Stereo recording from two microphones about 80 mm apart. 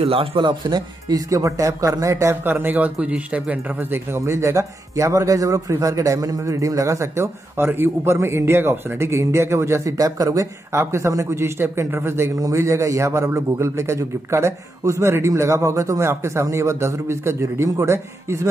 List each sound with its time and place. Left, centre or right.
0.4 s speech: right
1.0 s speech: right
2.4 s a man's voice: right
12.4 s a man's voice: right